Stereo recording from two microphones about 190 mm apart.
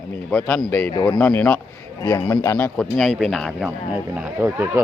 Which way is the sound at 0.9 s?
20° left (ahead or behind).